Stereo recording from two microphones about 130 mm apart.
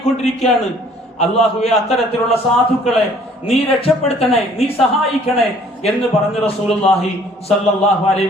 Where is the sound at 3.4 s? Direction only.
50° left (ahead or behind).